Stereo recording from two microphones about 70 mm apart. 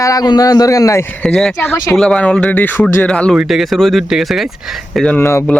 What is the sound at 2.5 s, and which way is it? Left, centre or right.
Speech, left.